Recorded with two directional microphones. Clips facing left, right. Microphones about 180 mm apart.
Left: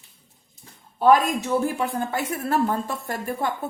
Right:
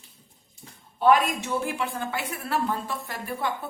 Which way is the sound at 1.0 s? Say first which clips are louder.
Left 3 dB; 40° left (ahead or behind).